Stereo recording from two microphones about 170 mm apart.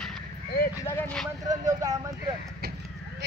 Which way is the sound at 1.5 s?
20° right (ahead or behind).